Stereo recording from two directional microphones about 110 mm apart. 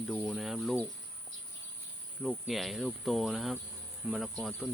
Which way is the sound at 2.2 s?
Centre (ahead or behind).